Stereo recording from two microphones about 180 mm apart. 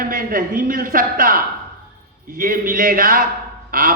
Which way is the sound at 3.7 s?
55° right (ahead or behind).